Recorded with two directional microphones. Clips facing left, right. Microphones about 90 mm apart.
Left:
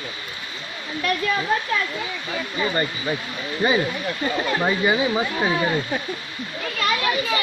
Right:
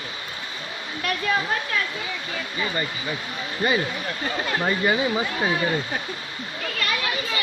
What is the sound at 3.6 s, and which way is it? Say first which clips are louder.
Speech: left 2 dB; 20° left (ahead or behind).